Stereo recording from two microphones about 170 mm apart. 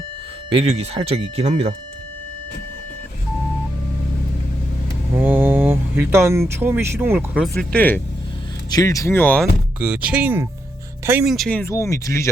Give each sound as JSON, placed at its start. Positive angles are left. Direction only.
{"t": 0.5, "sound": "speech", "side_deg": -35}
{"t": 5.1, "sound": "speech", "side_deg": -10}
{"t": 7.4, "sound": "speech", "side_deg": 0}
{"t": 8.7, "sound": "speech", "side_deg": 20}
{"t": 9.8, "sound": "speech", "side_deg": -10}
{"t": 11.3, "sound": "speech", "side_deg": 5}